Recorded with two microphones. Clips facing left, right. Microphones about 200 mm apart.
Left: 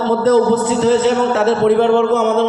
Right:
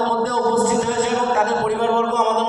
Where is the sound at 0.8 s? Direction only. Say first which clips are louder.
Left 7 dB; 85° left.